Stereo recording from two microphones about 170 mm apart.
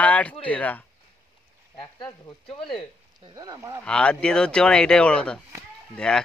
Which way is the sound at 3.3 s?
20° right (ahead or behind).